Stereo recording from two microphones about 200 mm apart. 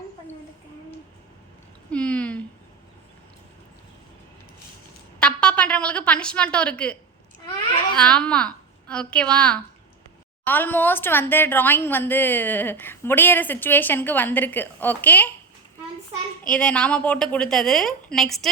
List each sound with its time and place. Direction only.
1.9 s a sound: 5° left (ahead or behind)
5.2 s a woman's voice: 5° left (ahead or behind)
16.5 s a woman's voice: 5° left (ahead or behind)